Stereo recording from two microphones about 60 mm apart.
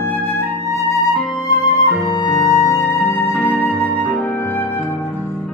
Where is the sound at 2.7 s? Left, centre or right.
Left.